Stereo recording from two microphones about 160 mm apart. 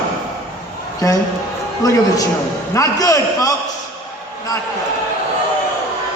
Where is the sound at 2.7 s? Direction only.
20° left (ahead or behind).